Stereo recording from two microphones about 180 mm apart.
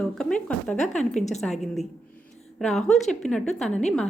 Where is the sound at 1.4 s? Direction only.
Centre (ahead or behind).